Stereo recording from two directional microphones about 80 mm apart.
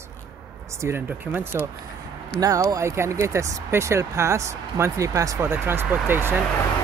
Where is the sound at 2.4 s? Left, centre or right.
Right.